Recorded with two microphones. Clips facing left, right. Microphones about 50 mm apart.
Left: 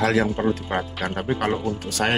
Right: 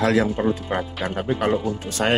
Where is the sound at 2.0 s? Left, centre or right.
Centre.